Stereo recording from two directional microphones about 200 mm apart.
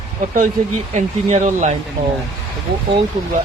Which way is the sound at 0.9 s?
35° right (ahead or behind).